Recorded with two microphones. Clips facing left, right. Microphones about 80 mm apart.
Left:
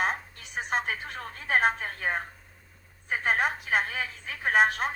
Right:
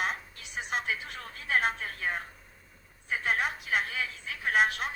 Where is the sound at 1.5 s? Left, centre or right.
Left.